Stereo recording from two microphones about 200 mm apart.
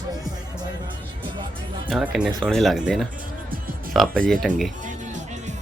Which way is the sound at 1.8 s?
Centre (ahead or behind).